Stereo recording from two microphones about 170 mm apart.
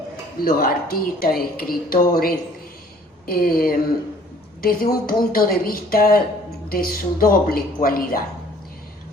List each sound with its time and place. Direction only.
0.4 s speech: 60° left (ahead or behind)